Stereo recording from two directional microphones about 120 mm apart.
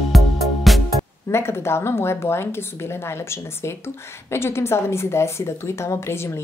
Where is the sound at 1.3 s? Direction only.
20° left (ahead or behind).